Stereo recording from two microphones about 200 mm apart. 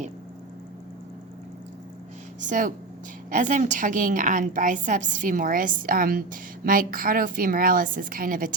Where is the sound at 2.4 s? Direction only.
40° right (ahead or behind).